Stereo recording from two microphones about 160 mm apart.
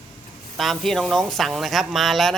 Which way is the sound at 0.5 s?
Centre (ahead or behind).